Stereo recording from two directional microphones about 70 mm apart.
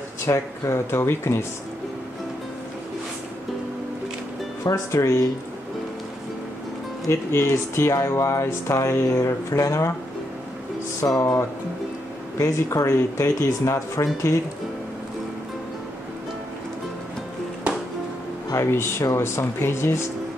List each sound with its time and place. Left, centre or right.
0.3 s speech: left
4.9 s speech: left
7.1 s speech: left
11.1 s speech: left
12.4 s speech: left
18.5 s speech: left